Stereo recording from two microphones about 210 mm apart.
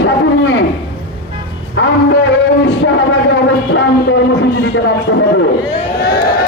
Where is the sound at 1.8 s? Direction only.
65° left (ahead or behind).